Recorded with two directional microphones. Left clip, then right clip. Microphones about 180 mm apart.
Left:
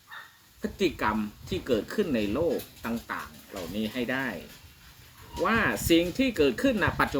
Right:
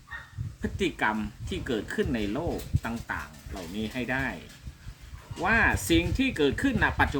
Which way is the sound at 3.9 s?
15° right (ahead or behind).